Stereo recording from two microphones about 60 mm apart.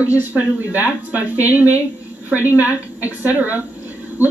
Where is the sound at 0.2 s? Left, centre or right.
Right.